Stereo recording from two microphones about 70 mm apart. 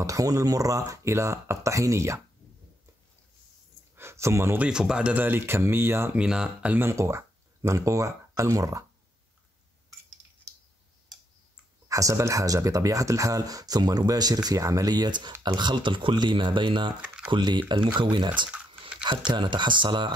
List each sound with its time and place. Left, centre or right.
0.0 s speech: right
3.9 s a sound: right
4.6 s speech: centre
5.1 s speech: right
6.1 s speech: centre
6.8 s speech: right
11.9 s speech: right
17.0 s typing: centre
17.4 s speech: right
19.2 s speech: right